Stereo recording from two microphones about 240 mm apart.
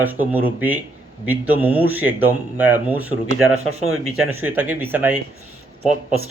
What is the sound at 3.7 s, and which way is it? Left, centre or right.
Speech, right.